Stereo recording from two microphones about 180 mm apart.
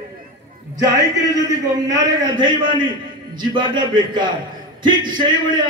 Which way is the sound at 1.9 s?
25° right (ahead or behind).